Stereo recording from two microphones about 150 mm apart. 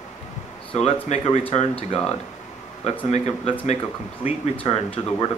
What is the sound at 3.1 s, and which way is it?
Speech, 50° left (ahead or behind).